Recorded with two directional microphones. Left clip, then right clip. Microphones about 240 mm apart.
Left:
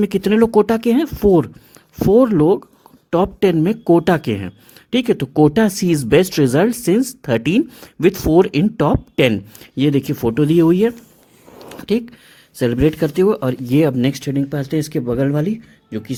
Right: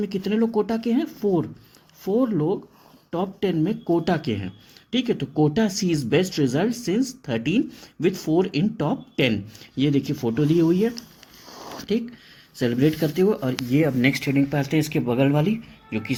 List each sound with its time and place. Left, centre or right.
0.0 s speech: left
11.5 s a sound: centre
12.5 s speech: left
14.5 s speech: left